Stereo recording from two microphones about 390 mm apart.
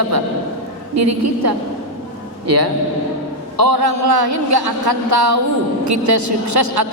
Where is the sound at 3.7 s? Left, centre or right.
Right.